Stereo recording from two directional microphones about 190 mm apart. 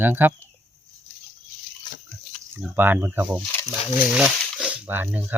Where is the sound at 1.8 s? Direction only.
25° left (ahead or behind).